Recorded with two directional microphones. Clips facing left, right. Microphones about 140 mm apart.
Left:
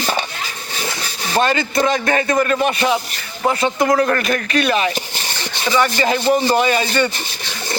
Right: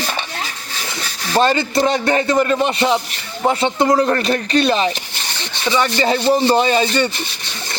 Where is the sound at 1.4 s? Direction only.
30° right (ahead or behind).